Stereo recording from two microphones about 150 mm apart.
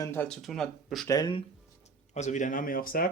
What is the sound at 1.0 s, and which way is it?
Speech, 25° left (ahead or behind).